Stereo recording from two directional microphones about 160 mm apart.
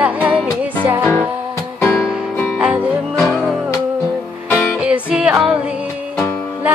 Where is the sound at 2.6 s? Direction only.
10° right (ahead or behind).